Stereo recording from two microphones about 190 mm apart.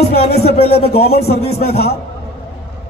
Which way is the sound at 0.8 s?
35° left (ahead or behind).